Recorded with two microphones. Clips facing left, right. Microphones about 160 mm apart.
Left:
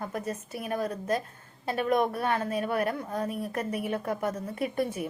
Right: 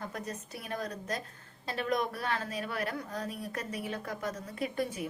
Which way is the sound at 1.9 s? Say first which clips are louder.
Left 6 dB; 55° left (ahead or behind).